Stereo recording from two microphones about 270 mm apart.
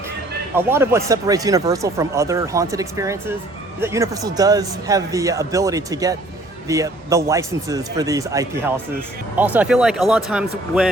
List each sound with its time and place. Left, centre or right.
0.5 s speech: centre